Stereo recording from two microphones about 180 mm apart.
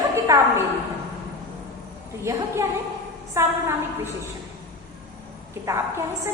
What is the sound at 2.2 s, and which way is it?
A woman's voice, 15° right (ahead or behind).